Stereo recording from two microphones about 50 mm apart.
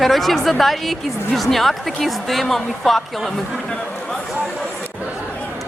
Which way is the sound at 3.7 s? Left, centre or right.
Centre.